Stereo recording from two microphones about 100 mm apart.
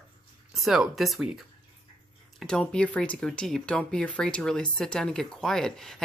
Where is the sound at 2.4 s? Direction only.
5° left (ahead or behind).